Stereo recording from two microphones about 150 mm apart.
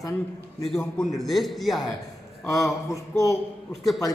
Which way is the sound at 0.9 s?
Centre (ahead or behind).